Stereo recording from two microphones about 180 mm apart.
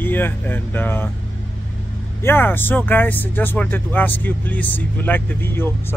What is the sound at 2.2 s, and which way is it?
Speech, 10° left (ahead or behind).